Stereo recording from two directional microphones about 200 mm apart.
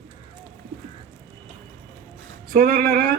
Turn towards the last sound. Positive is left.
turn(degrees=-45)  # may be behind; listen again after turning